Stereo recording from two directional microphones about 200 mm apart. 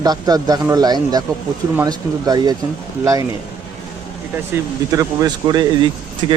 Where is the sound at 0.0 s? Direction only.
20° right (ahead or behind).